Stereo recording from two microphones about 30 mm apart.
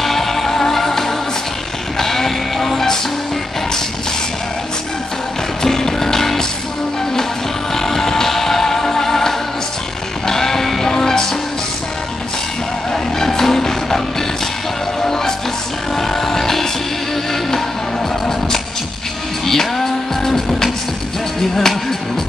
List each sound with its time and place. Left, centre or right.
0.0 s music: centre
5.6 s music: centre
7.7 s music: centre
12.9 s vehicle: centre
15.0 s music: centre
19.4 s music: centre